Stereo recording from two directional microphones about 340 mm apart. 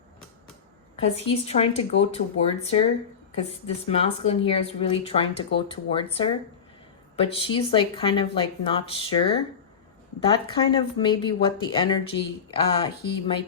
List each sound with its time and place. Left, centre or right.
1.0 s speech: centre
10.5 s speech: centre